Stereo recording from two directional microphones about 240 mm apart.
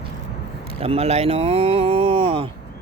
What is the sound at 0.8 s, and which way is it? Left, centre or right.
Speech, right.